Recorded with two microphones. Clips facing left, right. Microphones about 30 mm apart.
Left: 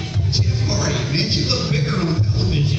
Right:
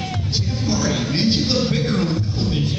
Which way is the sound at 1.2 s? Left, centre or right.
Left.